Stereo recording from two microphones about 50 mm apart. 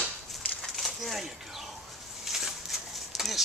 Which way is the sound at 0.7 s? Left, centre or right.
Centre.